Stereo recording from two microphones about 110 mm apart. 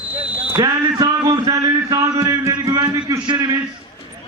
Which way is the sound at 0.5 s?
30° right (ahead or behind).